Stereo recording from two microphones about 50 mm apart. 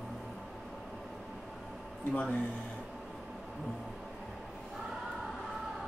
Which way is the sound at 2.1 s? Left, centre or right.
Left.